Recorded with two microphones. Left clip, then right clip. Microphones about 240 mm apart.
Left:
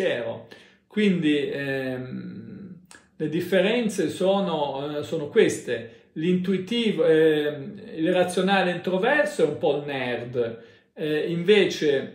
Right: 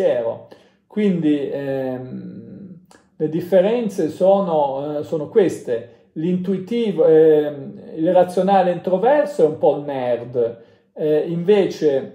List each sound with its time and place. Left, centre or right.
0.9 s speech: centre
3.2 s speech: centre